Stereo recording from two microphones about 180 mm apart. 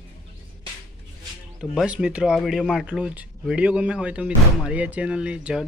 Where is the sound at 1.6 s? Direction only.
5° right (ahead or behind).